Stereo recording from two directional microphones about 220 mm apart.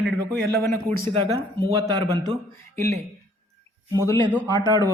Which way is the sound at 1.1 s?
20° right (ahead or behind).